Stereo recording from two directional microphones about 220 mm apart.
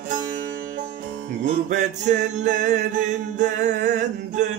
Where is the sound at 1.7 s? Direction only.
35° right (ahead or behind).